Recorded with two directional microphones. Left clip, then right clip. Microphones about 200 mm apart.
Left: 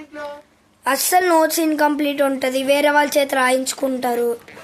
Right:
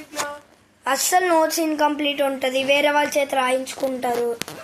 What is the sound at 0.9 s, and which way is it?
A woman's voice, 25° left (ahead or behind).